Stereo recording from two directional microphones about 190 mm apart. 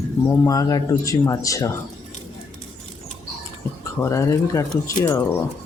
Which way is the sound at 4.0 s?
15° left (ahead or behind).